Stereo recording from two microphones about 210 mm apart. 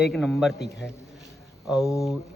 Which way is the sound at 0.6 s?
55° left (ahead or behind).